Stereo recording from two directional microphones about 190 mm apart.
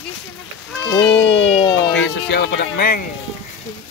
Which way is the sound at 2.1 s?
60° left (ahead or behind).